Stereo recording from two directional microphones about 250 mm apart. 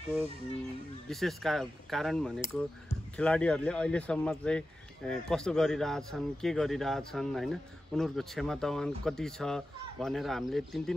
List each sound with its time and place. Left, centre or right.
1.0 s speech: centre